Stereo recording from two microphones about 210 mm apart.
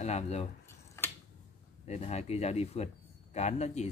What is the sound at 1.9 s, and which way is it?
Speech, 30° left (ahead or behind).